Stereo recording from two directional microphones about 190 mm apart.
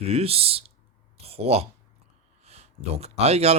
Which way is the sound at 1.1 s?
30° right (ahead or behind).